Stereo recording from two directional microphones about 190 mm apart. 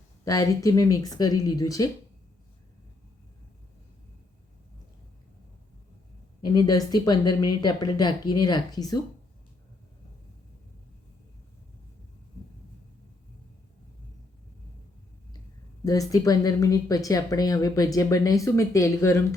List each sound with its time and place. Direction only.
0.3 s a woman's voice: 15° left (ahead or behind)
6.4 s a woman's voice: 20° left (ahead or behind)
15.8 s a woman's voice: 20° left (ahead or behind)